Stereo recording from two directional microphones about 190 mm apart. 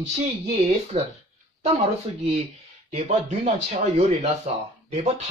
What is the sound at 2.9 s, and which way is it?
A man's voice, 35° right (ahead or behind).